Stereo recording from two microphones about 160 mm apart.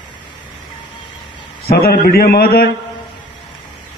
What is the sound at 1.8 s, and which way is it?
Speech, 70° left (ahead or behind).